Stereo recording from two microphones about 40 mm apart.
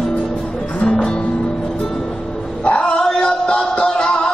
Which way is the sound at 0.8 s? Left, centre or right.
Left.